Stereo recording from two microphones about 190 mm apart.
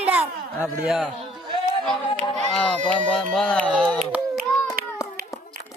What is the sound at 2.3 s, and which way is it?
Speech, 5° left (ahead or behind).